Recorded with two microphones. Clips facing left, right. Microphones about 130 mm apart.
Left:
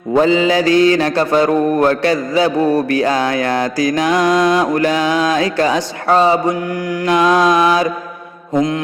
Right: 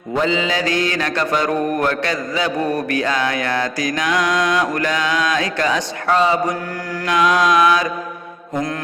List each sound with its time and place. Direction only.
0.1 s mantra: 35° left (ahead or behind)
8.5 s mantra: 20° left (ahead or behind)